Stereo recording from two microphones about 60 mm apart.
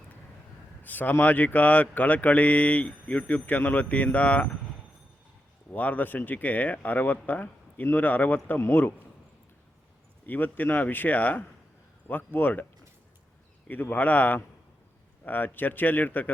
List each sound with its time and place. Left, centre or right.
0.8 s a sound: left
1.2 s speech: left
5.7 s speech: left
10.2 s speech: left
13.7 s speech: left